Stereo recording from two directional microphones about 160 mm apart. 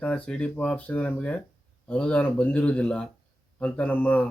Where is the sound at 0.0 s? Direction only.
5° left (ahead or behind).